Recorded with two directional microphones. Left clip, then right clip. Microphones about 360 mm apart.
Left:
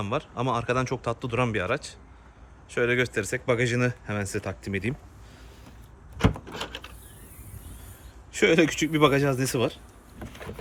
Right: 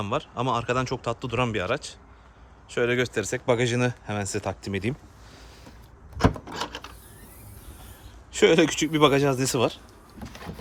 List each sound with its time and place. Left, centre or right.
0.0 s speech: centre
6.5 s a sound: centre
8.3 s speech: centre